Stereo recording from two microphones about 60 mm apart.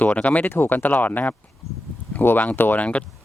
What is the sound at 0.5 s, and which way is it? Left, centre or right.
Speech, left.